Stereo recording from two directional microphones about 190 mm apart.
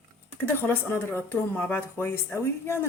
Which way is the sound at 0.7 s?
10° left (ahead or behind).